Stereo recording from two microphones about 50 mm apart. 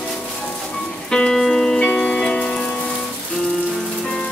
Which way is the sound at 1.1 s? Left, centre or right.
Centre.